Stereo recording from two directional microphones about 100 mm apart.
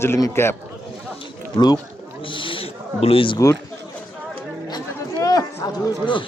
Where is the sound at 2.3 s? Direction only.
60° left (ahead or behind).